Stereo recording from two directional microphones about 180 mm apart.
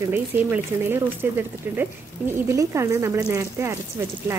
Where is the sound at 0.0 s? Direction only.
10° right (ahead or behind).